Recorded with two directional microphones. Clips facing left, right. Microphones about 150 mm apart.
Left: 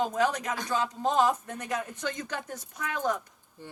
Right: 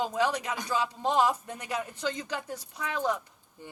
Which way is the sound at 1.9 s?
30° right (ahead or behind).